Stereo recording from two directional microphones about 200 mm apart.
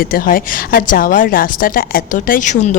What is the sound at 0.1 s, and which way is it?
A woman's voice, 45° left (ahead or behind).